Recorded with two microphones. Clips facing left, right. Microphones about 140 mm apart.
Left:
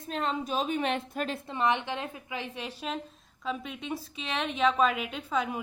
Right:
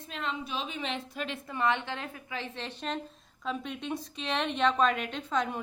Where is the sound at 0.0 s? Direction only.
40° left (ahead or behind).